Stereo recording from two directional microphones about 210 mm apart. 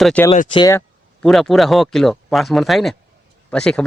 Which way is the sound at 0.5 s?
15° left (ahead or behind).